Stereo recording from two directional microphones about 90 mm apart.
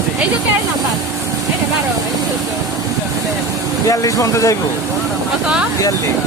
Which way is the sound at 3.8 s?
40° left (ahead or behind).